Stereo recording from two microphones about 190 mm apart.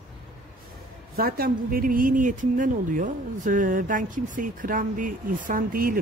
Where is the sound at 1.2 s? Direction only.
50° right (ahead or behind).